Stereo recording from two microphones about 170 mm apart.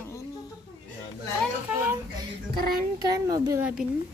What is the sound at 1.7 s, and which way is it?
Speech, 10° right (ahead or behind).